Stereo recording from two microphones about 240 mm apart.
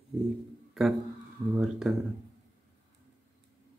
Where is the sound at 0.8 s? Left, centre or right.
Centre.